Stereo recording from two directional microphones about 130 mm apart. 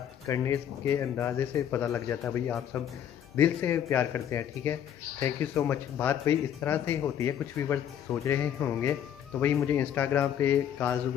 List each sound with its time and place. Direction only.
0.3 s speech: 20° left (ahead or behind)